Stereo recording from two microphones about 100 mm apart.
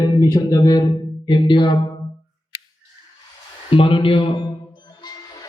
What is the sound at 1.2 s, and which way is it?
Speech, 50° left (ahead or behind).